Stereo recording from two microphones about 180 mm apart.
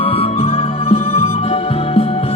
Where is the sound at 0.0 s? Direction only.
30° left (ahead or behind).